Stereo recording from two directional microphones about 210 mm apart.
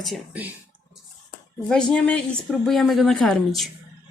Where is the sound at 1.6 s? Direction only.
5° left (ahead or behind).